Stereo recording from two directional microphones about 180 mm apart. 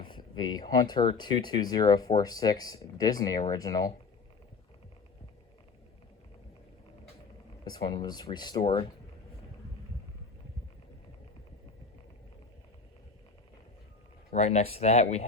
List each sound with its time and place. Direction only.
0.0 s speech: 25° left (ahead or behind)
7.6 s speech: 25° left (ahead or behind)
14.3 s speech: 35° left (ahead or behind)